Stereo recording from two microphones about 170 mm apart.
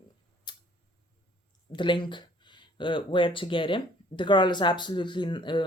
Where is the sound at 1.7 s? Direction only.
30° left (ahead or behind).